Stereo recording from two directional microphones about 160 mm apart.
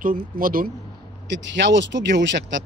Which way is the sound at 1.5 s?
90° right.